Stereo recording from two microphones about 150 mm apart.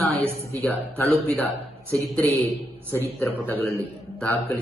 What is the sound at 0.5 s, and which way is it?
Speech, 15° left (ahead or behind).